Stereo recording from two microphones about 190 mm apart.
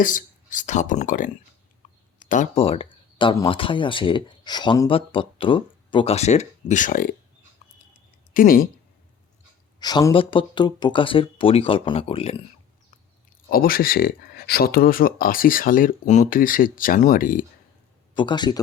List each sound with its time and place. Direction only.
0.0 s speech: 45° left (ahead or behind)
2.1 s a sound: 45° left (ahead or behind)
2.6 s speech: 30° left (ahead or behind); by 7.2 s 45° left (ahead or behind)
7.6 s a sound: 35° left (ahead or behind)
8.3 s speech: 45° left (ahead or behind)
9.8 s speech: 20° left (ahead or behind)
13.5 s speech: 50° left (ahead or behind)
18.1 s speech: 25° left (ahead or behind)